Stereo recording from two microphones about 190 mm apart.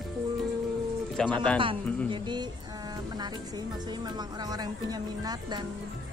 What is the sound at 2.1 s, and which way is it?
Speech, 25° right (ahead or behind).